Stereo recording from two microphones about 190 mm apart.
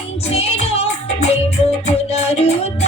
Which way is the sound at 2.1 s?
35° left (ahead or behind).